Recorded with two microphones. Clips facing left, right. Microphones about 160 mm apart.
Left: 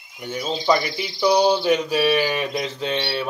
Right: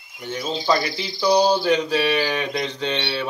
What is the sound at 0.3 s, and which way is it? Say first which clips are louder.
A man's voice: left 1 dB; 10° left (ahead or behind).